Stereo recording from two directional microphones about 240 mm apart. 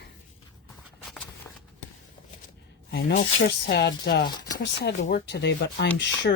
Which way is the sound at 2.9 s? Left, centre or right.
Left.